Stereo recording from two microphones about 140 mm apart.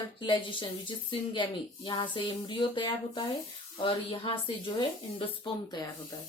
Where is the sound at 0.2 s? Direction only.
35° left (ahead or behind).